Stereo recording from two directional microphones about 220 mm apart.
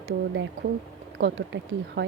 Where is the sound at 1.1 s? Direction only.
50° right (ahead or behind).